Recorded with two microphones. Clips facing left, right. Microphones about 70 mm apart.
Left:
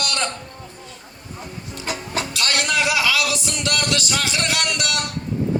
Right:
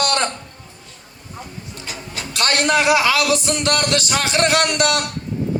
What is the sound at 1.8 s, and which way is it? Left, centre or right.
Vehicle, left.